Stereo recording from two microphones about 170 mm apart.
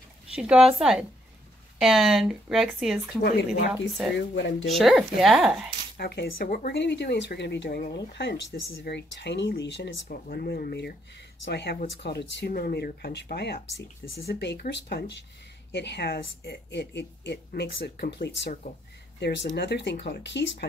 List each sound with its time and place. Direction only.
0.4 s speech: 5° right (ahead or behind)
3.2 s speech: 65° left (ahead or behind)
4.4 s speech: 90° left
4.6 s speech: centre (ahead or behind)
5.9 s speech: 70° left (ahead or behind)
6.8 s speech: 85° left
10.0 s speech: 60° left (ahead or behind)
11.4 s speech: 85° left
19.1 s speech: 90° left
19.5 s speech: 75° left (ahead or behind)